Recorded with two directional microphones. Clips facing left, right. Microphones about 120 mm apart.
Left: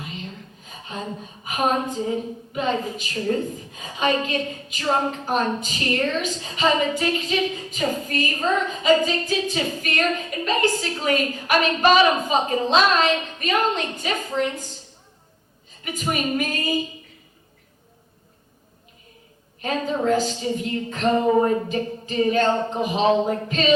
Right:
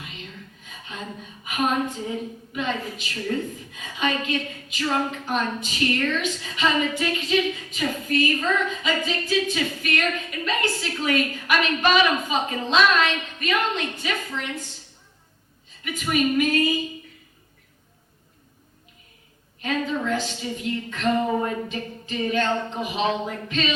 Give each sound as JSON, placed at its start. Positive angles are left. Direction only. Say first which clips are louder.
{"t": 0.0, "sound": "a sound", "louder": "left 5 dB", "side_deg": 35}
{"t": 1.5, "sound": "a woman's voice", "louder": "left 2 dB", "side_deg": 35}
{"t": 15.8, "sound": "a woman's voice", "louder": "right 2 dB", "side_deg": 40}
{"t": 19.6, "sound": "a woman's voice", "louder": "left 3 dB", "side_deg": 35}